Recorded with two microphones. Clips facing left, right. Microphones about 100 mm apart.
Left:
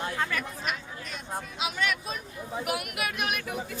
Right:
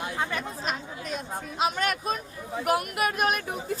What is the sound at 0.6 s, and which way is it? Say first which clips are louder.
Speech: right 2 dB; 40° right (ahead or behind).